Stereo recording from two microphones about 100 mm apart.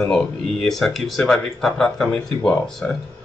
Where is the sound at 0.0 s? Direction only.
5° left (ahead or behind).